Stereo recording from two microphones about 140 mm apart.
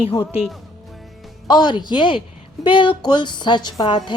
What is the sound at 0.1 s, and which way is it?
Speech, 20° left (ahead or behind).